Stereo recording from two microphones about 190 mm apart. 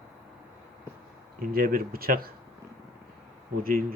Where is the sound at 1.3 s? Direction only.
50° right (ahead or behind).